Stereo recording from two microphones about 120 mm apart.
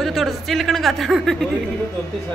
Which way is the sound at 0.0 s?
Centre (ahead or behind).